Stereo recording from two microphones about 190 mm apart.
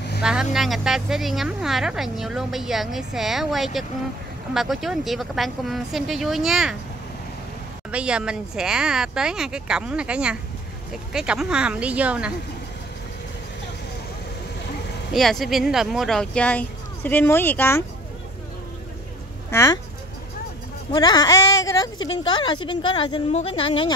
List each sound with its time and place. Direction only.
0.2 s speech: 5° right (ahead or behind)
7.9 s speech: 5° right (ahead or behind)
15.1 s speech: centre (ahead or behind)
19.5 s speech: 15° left (ahead or behind)
20.9 s speech: 20° left (ahead or behind)